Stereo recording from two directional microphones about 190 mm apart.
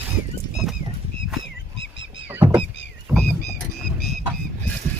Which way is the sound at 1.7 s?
70° left (ahead or behind).